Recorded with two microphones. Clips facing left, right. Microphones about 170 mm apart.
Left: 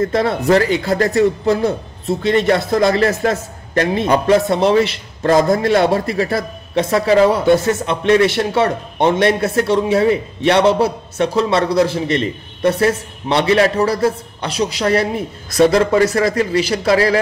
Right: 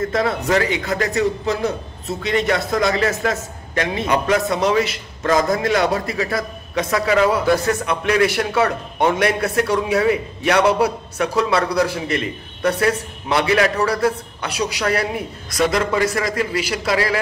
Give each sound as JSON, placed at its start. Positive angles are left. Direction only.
{"t": 0.0, "sound": "a man's voice", "side_deg": 30}